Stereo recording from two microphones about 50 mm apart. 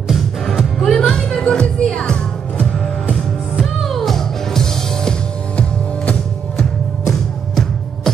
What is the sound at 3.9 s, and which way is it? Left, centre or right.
Music, centre.